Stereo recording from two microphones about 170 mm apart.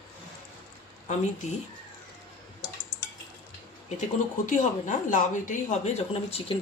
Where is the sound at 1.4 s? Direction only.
45° left (ahead or behind).